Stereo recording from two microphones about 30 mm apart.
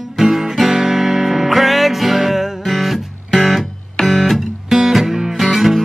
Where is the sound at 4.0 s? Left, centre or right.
Centre.